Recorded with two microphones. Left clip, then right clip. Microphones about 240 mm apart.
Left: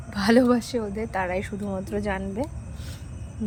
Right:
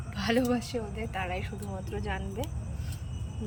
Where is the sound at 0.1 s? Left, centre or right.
Left.